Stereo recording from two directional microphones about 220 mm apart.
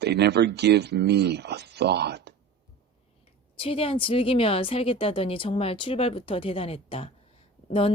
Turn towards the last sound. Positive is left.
turn(degrees=25)  # may be behind; listen again after turning